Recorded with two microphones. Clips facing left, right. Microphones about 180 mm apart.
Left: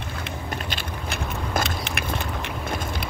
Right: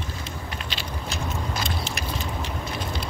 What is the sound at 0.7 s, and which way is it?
Vehicle, 55° left (ahead or behind).